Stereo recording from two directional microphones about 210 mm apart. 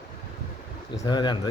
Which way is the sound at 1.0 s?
20° left (ahead or behind).